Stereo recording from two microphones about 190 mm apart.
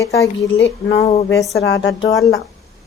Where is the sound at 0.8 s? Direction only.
30° left (ahead or behind).